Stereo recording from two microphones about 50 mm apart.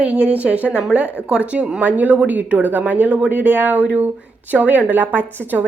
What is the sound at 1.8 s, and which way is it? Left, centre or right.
A woman's voice, right.